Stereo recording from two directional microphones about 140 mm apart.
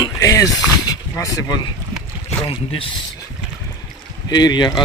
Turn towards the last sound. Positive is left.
turn(degrees=30)  # may be behind; listen again after turning